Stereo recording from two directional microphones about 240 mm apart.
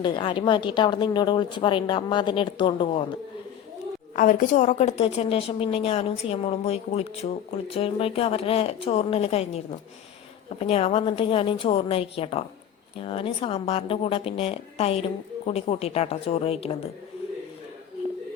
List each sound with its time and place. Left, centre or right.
0.0 s a woman's voice: centre
4.1 s a woman's voice: left